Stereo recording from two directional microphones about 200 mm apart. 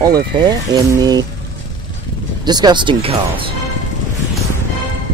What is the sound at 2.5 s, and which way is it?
Speech, 20° right (ahead or behind).